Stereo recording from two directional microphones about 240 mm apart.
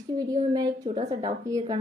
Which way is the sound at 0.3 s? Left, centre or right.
Centre.